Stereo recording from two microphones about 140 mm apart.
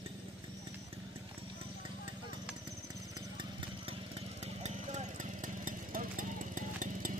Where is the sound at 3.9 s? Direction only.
45° right (ahead or behind).